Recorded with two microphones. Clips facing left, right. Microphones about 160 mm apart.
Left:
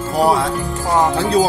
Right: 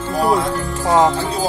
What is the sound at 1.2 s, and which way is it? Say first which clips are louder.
Speech: left 6 dB; 75° left (ahead or behind).